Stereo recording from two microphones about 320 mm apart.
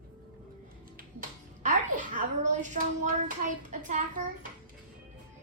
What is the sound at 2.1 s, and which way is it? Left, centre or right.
Hands, right.